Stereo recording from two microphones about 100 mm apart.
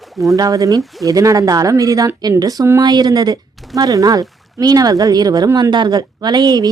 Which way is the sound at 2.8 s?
45° right (ahead or behind).